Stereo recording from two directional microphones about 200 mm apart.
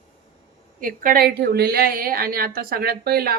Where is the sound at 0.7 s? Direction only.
45° right (ahead or behind).